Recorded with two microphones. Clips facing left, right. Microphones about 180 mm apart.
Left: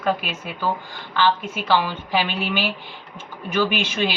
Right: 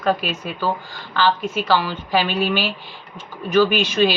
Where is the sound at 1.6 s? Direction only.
15° left (ahead or behind).